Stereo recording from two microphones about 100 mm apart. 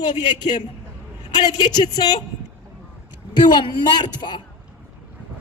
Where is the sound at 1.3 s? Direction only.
40° left (ahead or behind).